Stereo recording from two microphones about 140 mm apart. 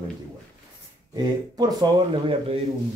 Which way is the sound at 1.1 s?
30° right (ahead or behind).